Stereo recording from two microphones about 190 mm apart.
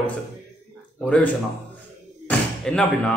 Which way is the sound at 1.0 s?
10° left (ahead or behind).